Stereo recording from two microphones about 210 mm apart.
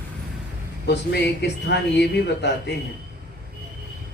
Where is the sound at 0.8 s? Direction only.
55° left (ahead or behind).